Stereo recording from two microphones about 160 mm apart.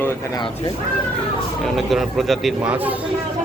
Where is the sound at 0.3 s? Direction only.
30° left (ahead or behind).